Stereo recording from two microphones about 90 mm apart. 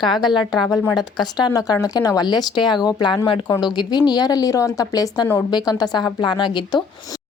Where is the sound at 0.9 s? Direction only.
50° left (ahead or behind).